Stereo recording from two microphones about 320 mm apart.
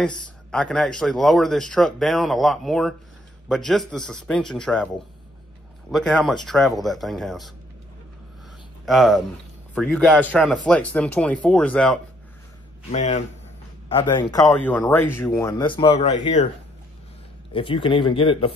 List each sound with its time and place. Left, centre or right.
0.0 s speech: centre
8.8 s speech: centre
12.9 s speech: left
17.5 s speech: centre